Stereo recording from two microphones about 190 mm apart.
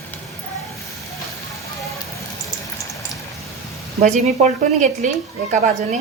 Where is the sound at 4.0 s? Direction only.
35° right (ahead or behind).